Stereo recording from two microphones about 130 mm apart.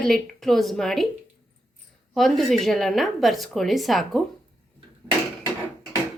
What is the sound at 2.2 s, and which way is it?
A woman's voice, centre (ahead or behind).